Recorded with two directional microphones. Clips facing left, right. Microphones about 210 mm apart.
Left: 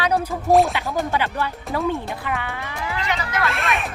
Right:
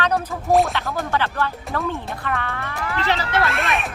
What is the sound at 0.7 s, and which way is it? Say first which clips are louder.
Speech: left 1 dB; 15° left (ahead or behind).